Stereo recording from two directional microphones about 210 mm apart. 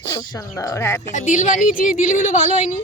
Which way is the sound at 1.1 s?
35° left (ahead or behind).